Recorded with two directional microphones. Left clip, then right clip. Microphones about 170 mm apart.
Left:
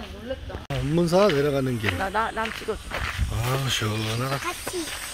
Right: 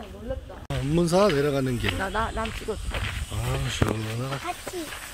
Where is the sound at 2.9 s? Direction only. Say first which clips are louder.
Left 3 dB; 5° left (ahead or behind).